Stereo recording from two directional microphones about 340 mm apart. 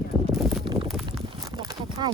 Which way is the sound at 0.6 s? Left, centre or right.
Centre.